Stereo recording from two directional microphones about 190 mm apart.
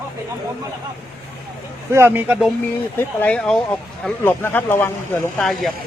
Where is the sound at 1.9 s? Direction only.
10° right (ahead or behind).